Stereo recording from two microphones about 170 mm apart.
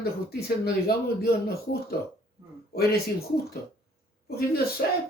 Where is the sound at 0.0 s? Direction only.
65° left (ahead or behind).